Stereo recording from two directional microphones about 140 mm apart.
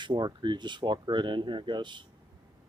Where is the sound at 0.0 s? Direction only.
35° right (ahead or behind).